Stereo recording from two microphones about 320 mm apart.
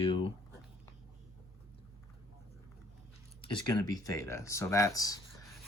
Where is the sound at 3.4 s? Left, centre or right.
Centre.